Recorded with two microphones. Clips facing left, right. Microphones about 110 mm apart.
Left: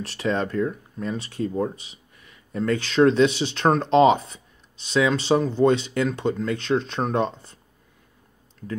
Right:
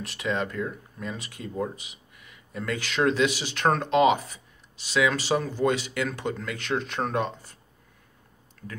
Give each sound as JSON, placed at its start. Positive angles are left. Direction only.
{"t": 0.0, "sound": "speech", "side_deg": 35}